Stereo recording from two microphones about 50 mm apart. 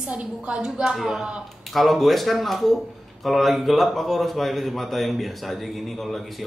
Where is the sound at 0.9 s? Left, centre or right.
Centre.